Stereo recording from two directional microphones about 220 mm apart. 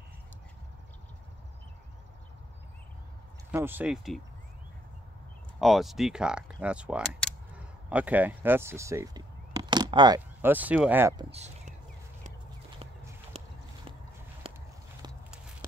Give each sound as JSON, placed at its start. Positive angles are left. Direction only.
{"t": 3.5, "sound": "speech", "side_deg": -10}
{"t": 5.6, "sound": "speech", "side_deg": 0}
{"t": 11.3, "sound": "a sound", "side_deg": -30}